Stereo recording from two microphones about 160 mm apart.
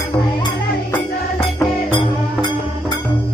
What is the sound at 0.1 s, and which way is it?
Speech, 20° left (ahead or behind).